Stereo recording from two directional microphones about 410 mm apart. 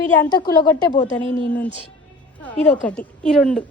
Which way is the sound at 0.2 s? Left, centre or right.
Centre.